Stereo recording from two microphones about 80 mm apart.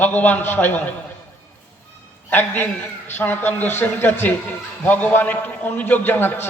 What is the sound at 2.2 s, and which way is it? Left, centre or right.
A man's voice, left.